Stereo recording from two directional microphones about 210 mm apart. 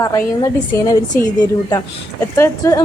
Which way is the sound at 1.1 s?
45° left (ahead or behind).